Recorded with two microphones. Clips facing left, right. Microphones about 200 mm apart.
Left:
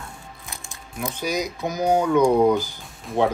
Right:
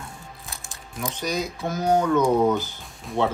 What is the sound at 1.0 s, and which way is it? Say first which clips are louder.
Speech: left 2 dB; 10° left (ahead or behind).